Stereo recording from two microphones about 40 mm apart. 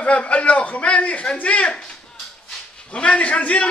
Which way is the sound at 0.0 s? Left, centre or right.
Left.